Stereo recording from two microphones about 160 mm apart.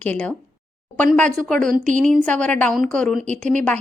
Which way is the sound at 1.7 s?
50° right (ahead or behind).